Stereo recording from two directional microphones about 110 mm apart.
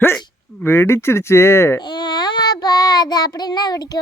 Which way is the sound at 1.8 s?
40° left (ahead or behind).